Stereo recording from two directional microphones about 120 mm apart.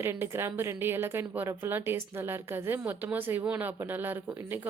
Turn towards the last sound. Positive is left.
turn(degrees=-15)  # may be behind; listen again after turning